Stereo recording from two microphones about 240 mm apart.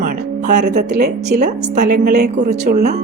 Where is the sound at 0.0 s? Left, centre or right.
Right.